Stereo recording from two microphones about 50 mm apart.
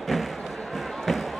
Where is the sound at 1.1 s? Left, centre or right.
Centre.